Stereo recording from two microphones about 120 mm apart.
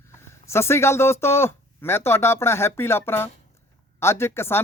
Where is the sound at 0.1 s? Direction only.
20° left (ahead or behind).